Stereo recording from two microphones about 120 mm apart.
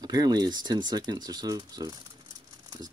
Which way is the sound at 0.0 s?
30° right (ahead or behind).